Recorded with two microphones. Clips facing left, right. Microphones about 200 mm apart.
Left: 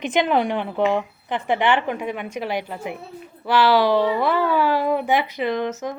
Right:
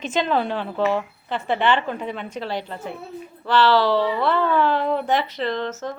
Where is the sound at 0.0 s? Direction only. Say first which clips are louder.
Left 2 dB; 15° left (ahead or behind).